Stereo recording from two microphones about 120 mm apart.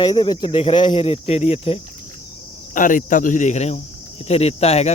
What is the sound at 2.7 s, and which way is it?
Speech, 90° left.